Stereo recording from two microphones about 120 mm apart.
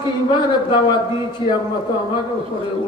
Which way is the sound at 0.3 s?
40° left (ahead or behind).